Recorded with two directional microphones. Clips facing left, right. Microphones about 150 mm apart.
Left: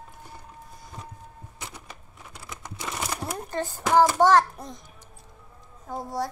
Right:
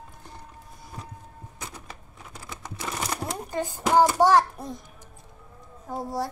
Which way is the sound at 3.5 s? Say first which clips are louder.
Even; 15° right (ahead or behind).